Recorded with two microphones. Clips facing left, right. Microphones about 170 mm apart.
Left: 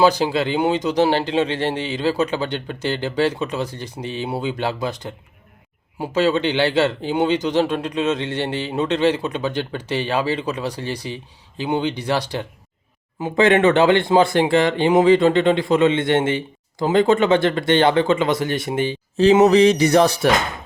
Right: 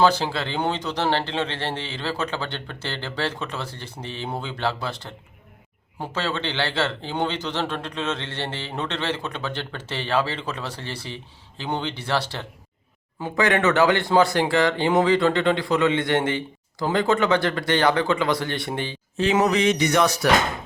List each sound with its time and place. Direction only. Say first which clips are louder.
0.0 s a man's voice: left 4 dB; 15° left (ahead or behind)
19.1 s speech: left 8 dB; 35° left (ahead or behind)